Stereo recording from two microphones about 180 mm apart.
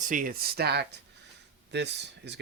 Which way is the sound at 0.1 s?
50° right (ahead or behind).